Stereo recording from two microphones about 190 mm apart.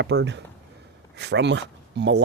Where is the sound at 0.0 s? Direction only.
65° right (ahead or behind).